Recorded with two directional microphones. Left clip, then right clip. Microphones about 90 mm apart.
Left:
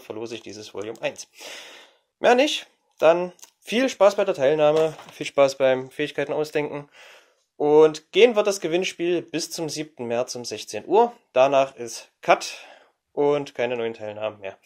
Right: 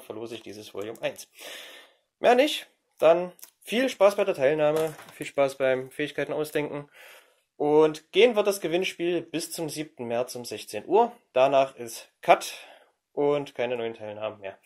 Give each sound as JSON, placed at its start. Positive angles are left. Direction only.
{"t": 0.0, "sound": "speech", "side_deg": 45}
{"t": 5.1, "sound": "speech", "side_deg": 50}
{"t": 6.4, "sound": "speech", "side_deg": 10}
{"t": 7.5, "sound": "speech", "side_deg": 30}
{"t": 13.1, "sound": "speech", "side_deg": 35}